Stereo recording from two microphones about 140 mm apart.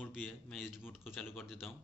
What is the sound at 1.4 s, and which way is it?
Speech, centre (ahead or behind).